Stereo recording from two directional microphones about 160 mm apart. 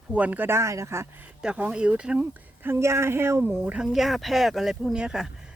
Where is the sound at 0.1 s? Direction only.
10° right (ahead or behind).